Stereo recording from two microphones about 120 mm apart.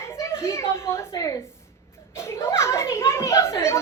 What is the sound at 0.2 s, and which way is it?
A woman's voice, 25° left (ahead or behind).